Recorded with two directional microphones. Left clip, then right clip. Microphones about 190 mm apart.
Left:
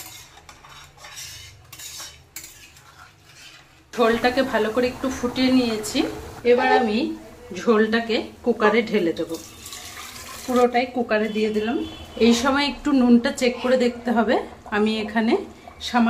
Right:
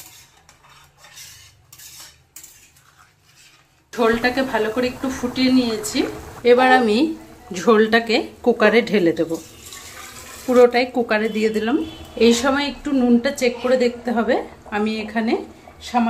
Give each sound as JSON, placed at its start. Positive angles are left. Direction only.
{"t": 3.9, "sound": "a woman's voice", "side_deg": -5}
{"t": 6.4, "sound": "speech", "side_deg": -50}
{"t": 7.5, "sound": "a woman's voice", "side_deg": -40}
{"t": 10.6, "sound": "a woman's voice", "side_deg": -25}
{"t": 12.2, "sound": "a woman's voice", "side_deg": -20}
{"t": 12.4, "sound": "a woman's voice", "side_deg": 5}